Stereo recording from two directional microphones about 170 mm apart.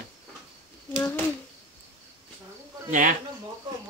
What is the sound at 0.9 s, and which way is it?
Speech, 5° left (ahead or behind).